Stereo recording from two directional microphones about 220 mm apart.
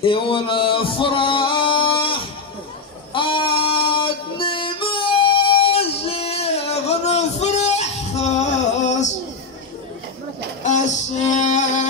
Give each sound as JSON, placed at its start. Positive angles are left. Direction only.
{"t": 0.0, "sound": "music", "side_deg": 25}
{"t": 10.6, "sound": "music", "side_deg": 35}